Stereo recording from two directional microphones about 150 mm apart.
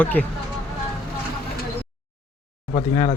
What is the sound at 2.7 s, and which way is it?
Speech, 40° left (ahead or behind).